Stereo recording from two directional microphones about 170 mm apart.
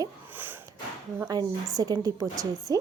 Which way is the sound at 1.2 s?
20° right (ahead or behind).